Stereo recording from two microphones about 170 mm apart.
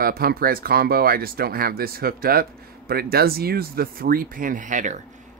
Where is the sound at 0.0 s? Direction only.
60° right (ahead or behind).